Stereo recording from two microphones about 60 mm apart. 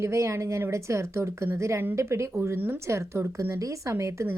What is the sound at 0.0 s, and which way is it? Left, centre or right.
Speech, right.